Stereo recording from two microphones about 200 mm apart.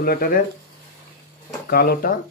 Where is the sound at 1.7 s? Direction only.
50° left (ahead or behind).